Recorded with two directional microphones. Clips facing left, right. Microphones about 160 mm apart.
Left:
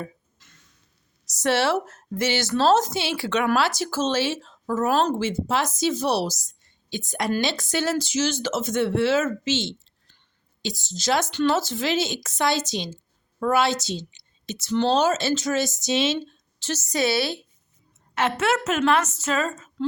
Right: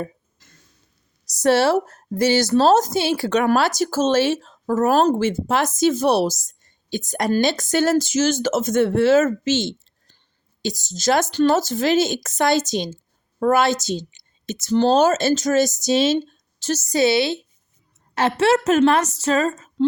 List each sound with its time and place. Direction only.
0.0 s a sound: 40° right (ahead or behind)
1.4 s a woman's voice: 40° right (ahead or behind); by 17.4 s 25° right (ahead or behind)
18.1 s a woman's voice: 35° right (ahead or behind)